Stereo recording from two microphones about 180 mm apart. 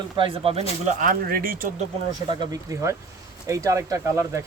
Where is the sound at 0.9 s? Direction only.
45° right (ahead or behind).